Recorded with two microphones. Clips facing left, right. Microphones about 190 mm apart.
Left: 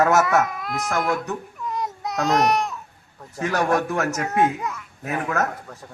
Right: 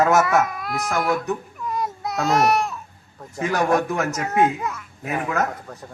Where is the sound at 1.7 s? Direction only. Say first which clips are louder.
Right 1 dB; 20° left (ahead or behind).